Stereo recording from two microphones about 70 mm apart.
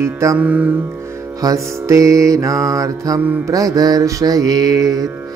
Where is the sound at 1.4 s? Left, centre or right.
Right.